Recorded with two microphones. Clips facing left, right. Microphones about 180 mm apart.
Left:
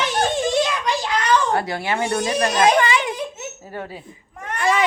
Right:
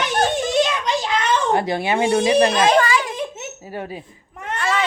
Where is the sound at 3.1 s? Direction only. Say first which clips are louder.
Right 1 dB; 20° right (ahead or behind).